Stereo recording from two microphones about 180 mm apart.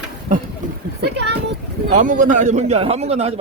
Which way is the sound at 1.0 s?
70° right (ahead or behind).